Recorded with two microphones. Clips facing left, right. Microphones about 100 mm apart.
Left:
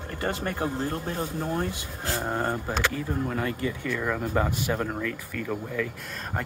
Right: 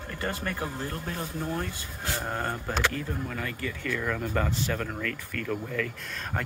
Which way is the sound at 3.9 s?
15° left (ahead or behind).